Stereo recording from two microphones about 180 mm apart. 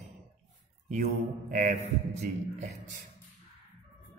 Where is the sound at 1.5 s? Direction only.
40° right (ahead or behind).